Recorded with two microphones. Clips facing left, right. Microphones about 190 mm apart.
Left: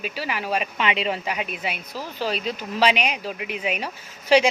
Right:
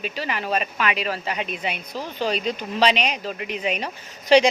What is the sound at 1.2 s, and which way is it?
Speech, 5° left (ahead or behind).